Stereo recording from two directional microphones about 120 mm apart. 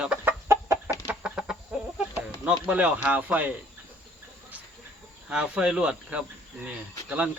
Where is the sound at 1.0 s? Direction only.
10° right (ahead or behind).